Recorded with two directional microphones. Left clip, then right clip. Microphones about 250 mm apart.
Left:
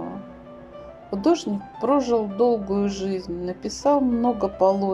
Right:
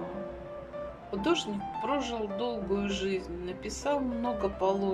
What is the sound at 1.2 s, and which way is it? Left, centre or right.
Speech, centre.